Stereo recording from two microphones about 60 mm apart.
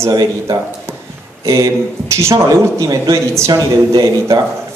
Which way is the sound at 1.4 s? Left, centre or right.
Right.